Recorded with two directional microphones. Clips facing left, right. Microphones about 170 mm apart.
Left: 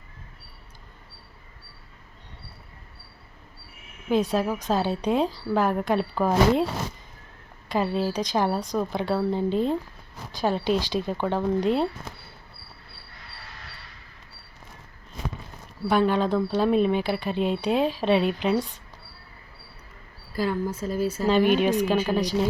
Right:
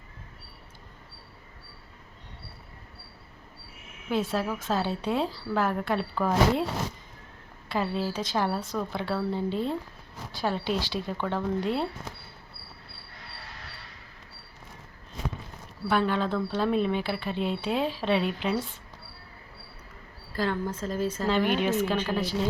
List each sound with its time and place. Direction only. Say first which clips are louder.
4.1 s speech: left 5 dB; 15° left (ahead or behind)
7.7 s speech: left 4 dB; 15° left (ahead or behind)
15.9 s speech: left 4 dB; 15° left (ahead or behind)
20.3 s speech: left 3 dB; 10° left (ahead or behind)